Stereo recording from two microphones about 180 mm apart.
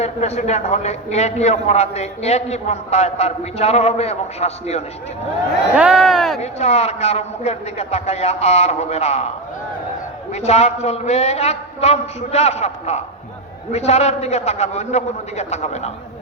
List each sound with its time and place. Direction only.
0.0 s a man's voice: 40° left (ahead or behind)
5.7 s speech: 5° right (ahead or behind)
6.4 s a man's voice: 35° left (ahead or behind)
10.3 s a man's voice: 35° left (ahead or behind)